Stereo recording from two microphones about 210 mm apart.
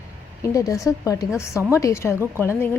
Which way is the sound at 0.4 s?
15° left (ahead or behind).